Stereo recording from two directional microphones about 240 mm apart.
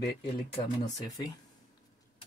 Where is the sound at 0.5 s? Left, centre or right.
Centre.